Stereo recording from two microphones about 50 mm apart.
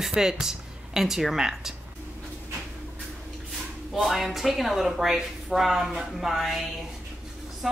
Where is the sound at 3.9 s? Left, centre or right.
Centre.